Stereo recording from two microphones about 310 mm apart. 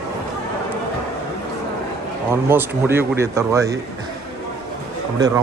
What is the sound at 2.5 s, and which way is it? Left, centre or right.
Speech, centre.